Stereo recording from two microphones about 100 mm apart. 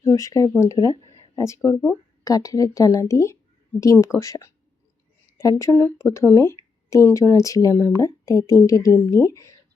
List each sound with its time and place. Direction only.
0.0 s speech: 30° left (ahead or behind)